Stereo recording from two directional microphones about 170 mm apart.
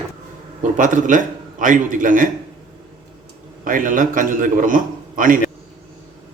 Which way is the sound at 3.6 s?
55° right (ahead or behind).